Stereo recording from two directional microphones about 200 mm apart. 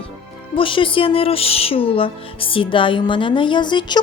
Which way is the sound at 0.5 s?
25° left (ahead or behind).